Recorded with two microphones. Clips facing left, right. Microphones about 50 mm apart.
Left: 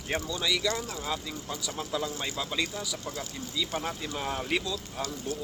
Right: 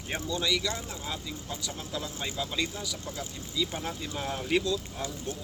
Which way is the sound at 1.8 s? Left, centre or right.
Left.